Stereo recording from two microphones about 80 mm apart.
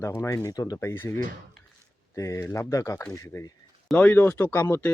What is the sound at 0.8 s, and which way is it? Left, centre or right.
Speech, left.